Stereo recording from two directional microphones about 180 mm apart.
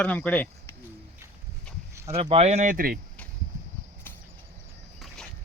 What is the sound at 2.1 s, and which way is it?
Speech, 35° right (ahead or behind).